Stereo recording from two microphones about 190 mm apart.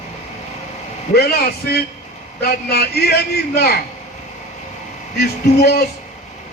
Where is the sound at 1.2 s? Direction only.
55° left (ahead or behind).